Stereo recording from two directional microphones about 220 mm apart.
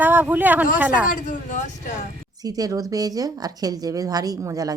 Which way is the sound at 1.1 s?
35° left (ahead or behind).